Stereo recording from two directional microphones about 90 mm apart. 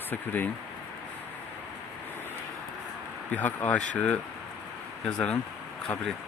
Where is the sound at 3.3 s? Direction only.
20° left (ahead or behind).